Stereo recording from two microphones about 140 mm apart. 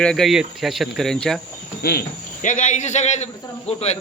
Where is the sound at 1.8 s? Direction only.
90° left.